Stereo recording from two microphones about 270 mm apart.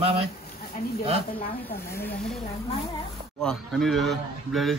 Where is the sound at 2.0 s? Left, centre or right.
Centre.